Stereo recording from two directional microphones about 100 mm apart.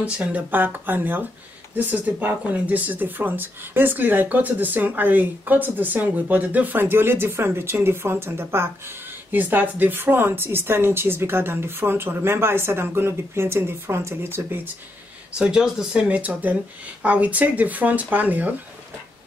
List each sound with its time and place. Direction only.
0.0 s a woman's voice: 15° right (ahead or behind)
15.3 s speech: 10° right (ahead or behind)